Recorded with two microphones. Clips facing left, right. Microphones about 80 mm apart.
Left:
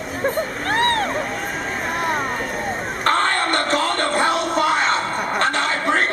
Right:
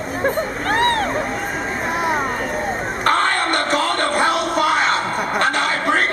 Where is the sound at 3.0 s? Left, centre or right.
Centre.